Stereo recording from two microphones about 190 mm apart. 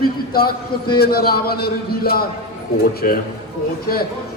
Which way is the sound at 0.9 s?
55° left (ahead or behind).